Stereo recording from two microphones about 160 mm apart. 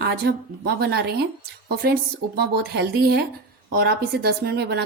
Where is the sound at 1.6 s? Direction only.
75° right (ahead or behind).